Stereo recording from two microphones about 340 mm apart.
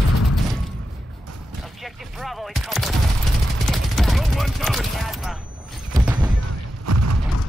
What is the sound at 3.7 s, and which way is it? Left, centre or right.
Chopping, centre.